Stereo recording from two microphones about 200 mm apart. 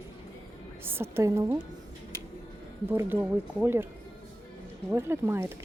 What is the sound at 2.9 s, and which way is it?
Speech, 10° right (ahead or behind).